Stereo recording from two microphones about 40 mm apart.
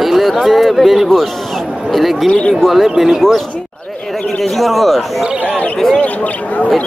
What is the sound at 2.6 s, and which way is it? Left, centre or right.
Speech, centre.